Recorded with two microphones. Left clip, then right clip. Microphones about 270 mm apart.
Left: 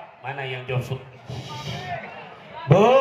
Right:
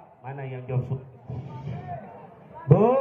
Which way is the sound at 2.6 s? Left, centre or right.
Left.